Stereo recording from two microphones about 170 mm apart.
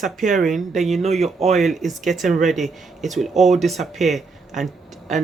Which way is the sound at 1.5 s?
Centre (ahead or behind).